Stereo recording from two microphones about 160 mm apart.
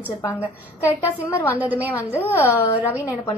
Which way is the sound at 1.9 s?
15° left (ahead or behind).